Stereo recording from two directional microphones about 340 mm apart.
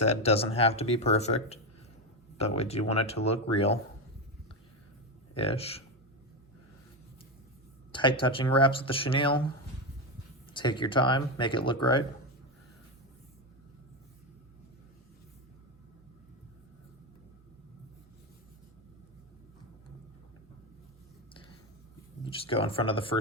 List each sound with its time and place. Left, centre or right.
0.0 s speech: centre
5.3 s speech: centre
7.9 s speech: centre
10.5 s speech: centre
22.2 s speech: centre